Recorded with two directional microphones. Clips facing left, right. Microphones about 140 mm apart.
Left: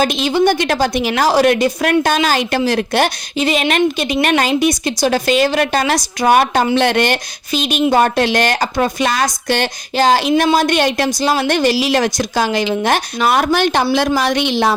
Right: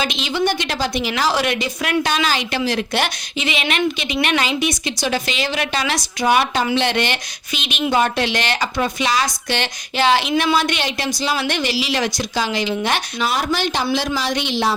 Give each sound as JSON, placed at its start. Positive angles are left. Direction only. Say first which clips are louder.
{"t": 0.0, "sound": "a woman's voice", "louder": "left 7 dB", "side_deg": 45}